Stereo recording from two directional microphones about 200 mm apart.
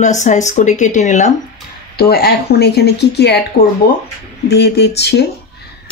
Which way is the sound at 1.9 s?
50° left (ahead or behind).